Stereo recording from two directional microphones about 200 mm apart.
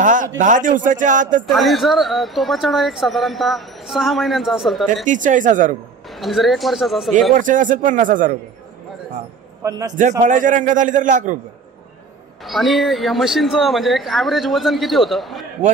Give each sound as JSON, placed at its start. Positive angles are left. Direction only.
{"t": 0.0, "sound": "a man's voice", "side_deg": -40}
{"t": 1.5, "sound": "speech", "side_deg": 0}
{"t": 5.0, "sound": "a man's voice", "side_deg": -40}
{"t": 6.0, "sound": "speech", "side_deg": 0}
{"t": 7.3, "sound": "a man's voice", "side_deg": -40}
{"t": 9.6, "sound": "a man's voice", "side_deg": -15}
{"t": 10.2, "sound": "a man's voice", "side_deg": -40}
{"t": 12.4, "sound": "speech", "side_deg": 0}